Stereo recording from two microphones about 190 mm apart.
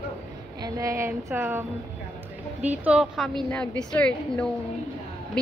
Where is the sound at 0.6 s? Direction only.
20° right (ahead or behind).